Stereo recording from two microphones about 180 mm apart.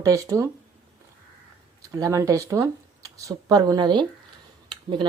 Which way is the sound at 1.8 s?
20° right (ahead or behind).